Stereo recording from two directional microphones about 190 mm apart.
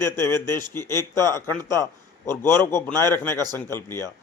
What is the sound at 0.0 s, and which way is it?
A man's voice, 15° left (ahead or behind).